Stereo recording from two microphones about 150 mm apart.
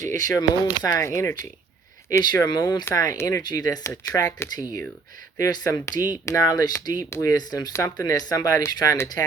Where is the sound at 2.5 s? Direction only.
30° left (ahead or behind).